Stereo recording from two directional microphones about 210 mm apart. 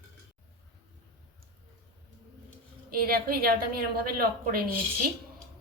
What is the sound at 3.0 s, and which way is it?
A woman's voice, 45° right (ahead or behind).